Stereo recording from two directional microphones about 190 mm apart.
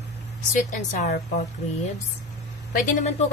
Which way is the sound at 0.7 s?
35° left (ahead or behind).